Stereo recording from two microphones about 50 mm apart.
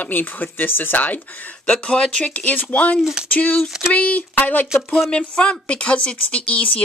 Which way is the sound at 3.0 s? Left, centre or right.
Centre.